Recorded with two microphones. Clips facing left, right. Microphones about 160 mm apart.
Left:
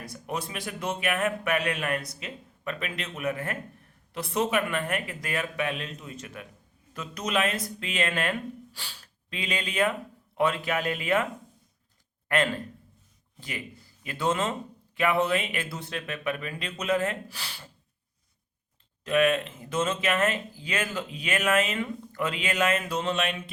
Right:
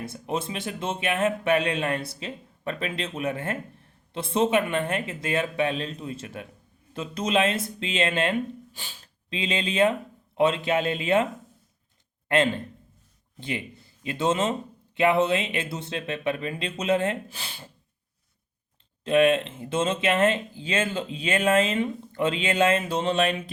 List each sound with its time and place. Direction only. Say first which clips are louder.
0.0 s speech: right 4 dB; 25° right (ahead or behind)
12.3 s speech: right 4 dB; 25° right (ahead or behind)
19.0 s speech: right 4 dB; 30° right (ahead or behind)